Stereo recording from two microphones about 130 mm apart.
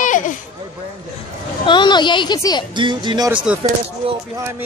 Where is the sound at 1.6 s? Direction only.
35° left (ahead or behind).